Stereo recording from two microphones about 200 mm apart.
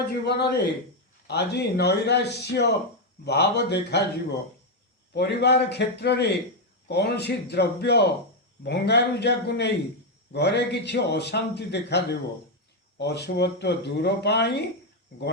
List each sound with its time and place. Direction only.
0.3 s a man's voice: 55° left (ahead or behind)